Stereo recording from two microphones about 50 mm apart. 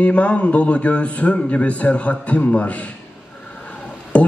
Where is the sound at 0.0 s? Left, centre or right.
Left.